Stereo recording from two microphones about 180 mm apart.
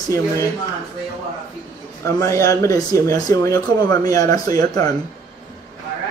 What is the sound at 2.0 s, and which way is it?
A man's voice, 15° left (ahead or behind).